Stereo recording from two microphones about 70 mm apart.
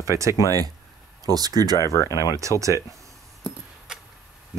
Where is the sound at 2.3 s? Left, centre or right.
Right.